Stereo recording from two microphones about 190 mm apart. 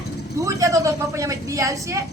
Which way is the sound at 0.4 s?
15° right (ahead or behind).